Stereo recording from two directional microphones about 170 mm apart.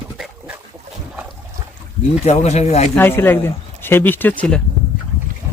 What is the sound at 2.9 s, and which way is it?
Speech, 15° left (ahead or behind).